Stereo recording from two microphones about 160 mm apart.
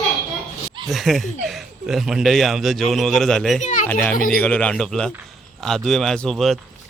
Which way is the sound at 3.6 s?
50° left (ahead or behind).